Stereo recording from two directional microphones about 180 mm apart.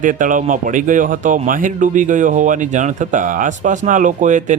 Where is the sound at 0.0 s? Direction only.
45° right (ahead or behind).